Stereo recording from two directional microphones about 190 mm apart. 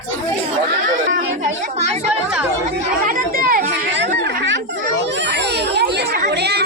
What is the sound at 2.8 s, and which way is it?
Chatter, 45° right (ahead or behind).